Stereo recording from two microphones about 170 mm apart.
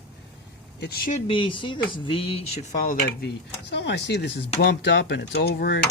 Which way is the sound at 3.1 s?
85° left.